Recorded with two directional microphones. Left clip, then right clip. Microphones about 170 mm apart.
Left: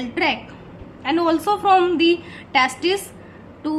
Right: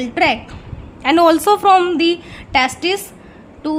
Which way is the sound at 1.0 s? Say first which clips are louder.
Right 8 dB; 65° right (ahead or behind).